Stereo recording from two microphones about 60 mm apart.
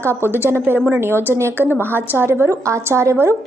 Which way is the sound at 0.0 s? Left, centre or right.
Right.